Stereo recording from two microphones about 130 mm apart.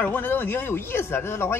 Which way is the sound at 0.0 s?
15° left (ahead or behind).